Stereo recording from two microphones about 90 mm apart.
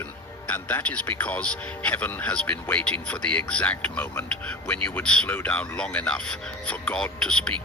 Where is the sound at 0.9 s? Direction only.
15° left (ahead or behind).